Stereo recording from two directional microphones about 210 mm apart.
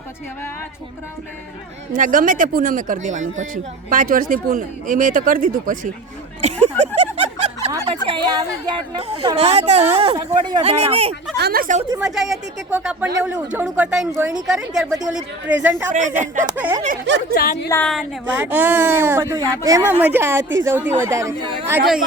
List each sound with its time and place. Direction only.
1.9 s speech: 40° right (ahead or behind)
6.4 s a sound: 30° right (ahead or behind)
8.0 s speech: 25° right (ahead or behind)
11.3 s speech: 50° right (ahead or behind)
11.9 s speech: centre (ahead or behind)
15.9 s speech: 35° right (ahead or behind)
16.6 s speech: 10° right (ahead or behind)
17.1 s speech: 55° right (ahead or behind)
17.3 s speech: 45° left (ahead or behind)
17.7 s speech: 5° left (ahead or behind)
18.3 s speech: 10° right (ahead or behind)
20.4 s speech: 60° right (ahead or behind)
20.7 s speech: 10° right (ahead or behind)